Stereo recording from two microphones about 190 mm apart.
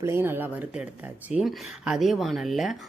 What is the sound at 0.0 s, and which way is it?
Speech, 15° right (ahead or behind).